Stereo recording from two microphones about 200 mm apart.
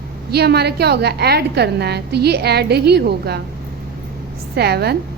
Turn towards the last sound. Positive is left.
turn(degrees=-55)  # may be behind; listen again after turning